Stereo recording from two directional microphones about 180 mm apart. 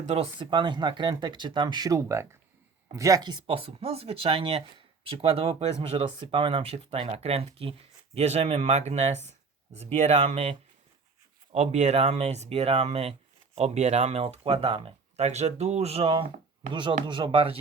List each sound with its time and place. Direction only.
0.0 s speech: 35° right (ahead or behind)